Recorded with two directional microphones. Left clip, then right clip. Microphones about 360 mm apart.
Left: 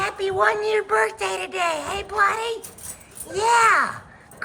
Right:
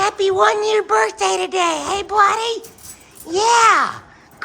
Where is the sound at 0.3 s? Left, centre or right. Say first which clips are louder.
Right 4 dB; centre.